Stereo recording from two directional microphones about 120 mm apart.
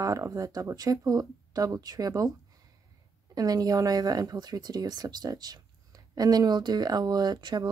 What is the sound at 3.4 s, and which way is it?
Speech, 30° right (ahead or behind).